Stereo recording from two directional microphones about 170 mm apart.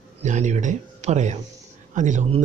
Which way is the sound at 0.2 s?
45° right (ahead or behind).